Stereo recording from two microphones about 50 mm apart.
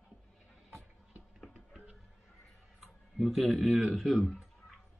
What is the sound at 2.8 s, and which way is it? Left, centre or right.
Speech, centre.